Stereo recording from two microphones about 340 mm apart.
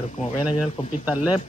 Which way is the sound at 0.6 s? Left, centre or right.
Centre.